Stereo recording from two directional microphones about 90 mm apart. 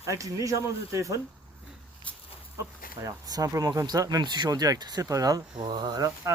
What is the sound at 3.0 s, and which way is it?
Speech, 40° right (ahead or behind).